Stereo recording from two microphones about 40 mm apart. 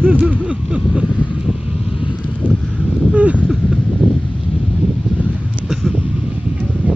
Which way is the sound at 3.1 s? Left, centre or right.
Right.